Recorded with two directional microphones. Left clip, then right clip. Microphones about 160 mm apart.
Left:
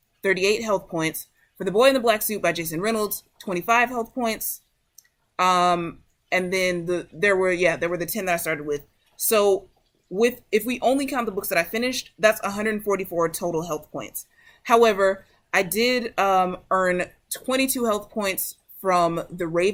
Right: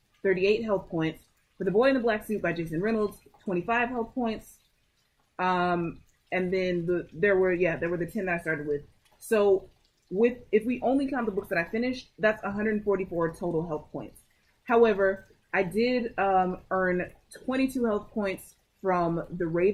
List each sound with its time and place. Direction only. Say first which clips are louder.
0.2 s speech: left 3 dB; 20° left (ahead or behind)
5.4 s speech: left 7 dB; 20° left (ahead or behind)
10.2 s speech: left 3 dB; 15° left (ahead or behind)
13.1 s speech: left 6 dB; 35° left (ahead or behind)
14.6 s speech: left 5 dB; 20° left (ahead or behind)